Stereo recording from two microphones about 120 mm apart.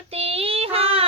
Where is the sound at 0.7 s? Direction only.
55° right (ahead or behind).